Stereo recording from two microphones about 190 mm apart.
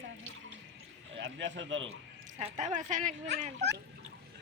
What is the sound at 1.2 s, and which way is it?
Speech, 70° right (ahead or behind).